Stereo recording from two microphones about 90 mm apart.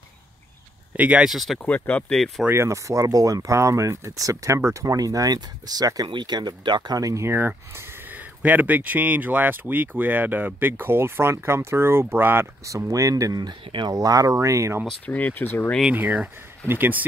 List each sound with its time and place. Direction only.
0.9 s speech: 15° right (ahead or behind)
1.3 s speech: centre (ahead or behind)
1.6 s speech: 15° left (ahead or behind)
2.1 s speech: 5° left (ahead or behind)
2.4 s speech: 30° right (ahead or behind)
12.6 s speech: 35° right (ahead or behind); by 13.9 s 60° right (ahead or behind)
13.9 s speech: 40° right (ahead or behind)
15.0 s speech: 15° left (ahead or behind)
15.9 s speech: 20° right (ahead or behind)